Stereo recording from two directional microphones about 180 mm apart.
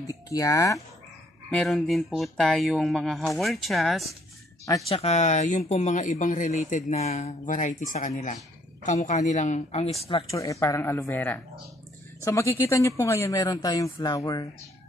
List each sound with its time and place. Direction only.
0.0 s speech: 20° left (ahead or behind)
1.5 s speech: 5° left (ahead or behind)
4.8 s speech: 35° left (ahead or behind)
10.3 s speech: 15° left (ahead or behind)